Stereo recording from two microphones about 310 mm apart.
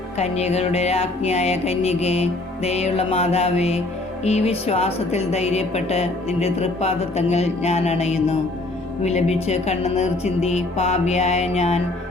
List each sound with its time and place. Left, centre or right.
0.2 s speech: left